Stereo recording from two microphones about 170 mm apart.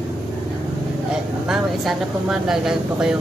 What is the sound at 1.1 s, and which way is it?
Speech, 5° right (ahead or behind).